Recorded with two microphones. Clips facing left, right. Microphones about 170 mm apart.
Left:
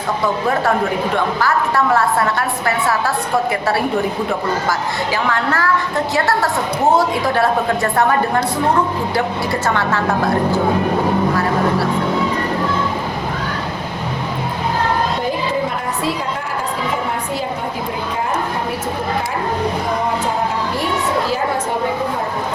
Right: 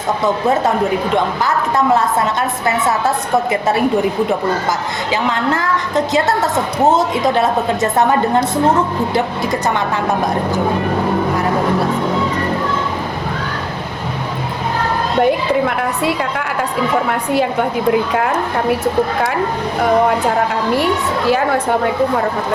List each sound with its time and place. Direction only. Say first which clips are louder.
1.1 s a woman's voice: right 1 dB; 20° right (ahead or behind)
5.1 s a woman's voice: right 3 dB; 20° right (ahead or behind)
9.1 s a woman's voice: even; 20° right (ahead or behind)
15.2 s a sound: right 5 dB; 65° right (ahead or behind)